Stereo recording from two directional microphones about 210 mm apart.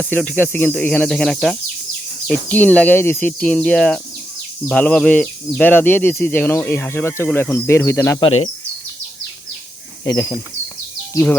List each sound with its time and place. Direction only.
0.0 s speech: 5° left (ahead or behind)
10.0 s speech: 15° left (ahead or behind)